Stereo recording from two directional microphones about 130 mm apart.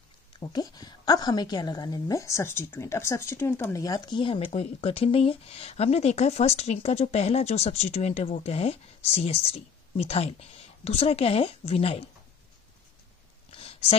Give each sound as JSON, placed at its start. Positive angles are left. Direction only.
{"t": 0.4, "sound": "a woman's voice", "side_deg": 30}
{"t": 4.5, "sound": "speech", "side_deg": 50}
{"t": 13.6, "sound": "a sound", "side_deg": 50}